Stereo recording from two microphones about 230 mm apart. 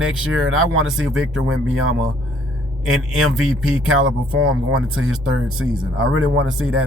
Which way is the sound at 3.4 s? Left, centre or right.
Right.